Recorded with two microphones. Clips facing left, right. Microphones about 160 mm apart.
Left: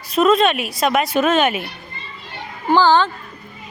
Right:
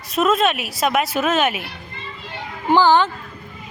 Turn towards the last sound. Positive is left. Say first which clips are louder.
# even
turn(degrees=-20)  # may be behind; listen again after turning